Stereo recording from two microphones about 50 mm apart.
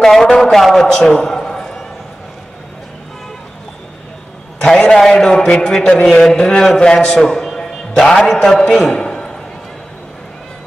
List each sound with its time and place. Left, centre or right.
0.0 s a man's voice: centre
4.6 s a man's voice: centre
8.9 s a sound: centre